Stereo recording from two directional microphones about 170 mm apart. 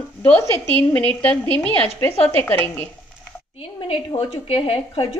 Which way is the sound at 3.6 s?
35° left (ahead or behind).